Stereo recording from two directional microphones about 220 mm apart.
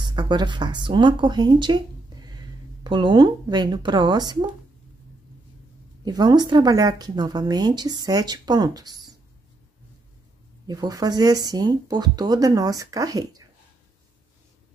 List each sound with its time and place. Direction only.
0.0 s speech: 20° right (ahead or behind)
6.0 s a woman's voice: 20° right (ahead or behind)
10.7 s speech: 15° right (ahead or behind)